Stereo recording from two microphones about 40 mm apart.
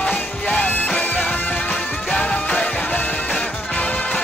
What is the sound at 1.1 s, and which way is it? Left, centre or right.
Music, left.